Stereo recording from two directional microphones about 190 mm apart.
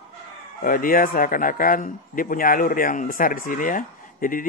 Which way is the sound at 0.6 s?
45° left (ahead or behind).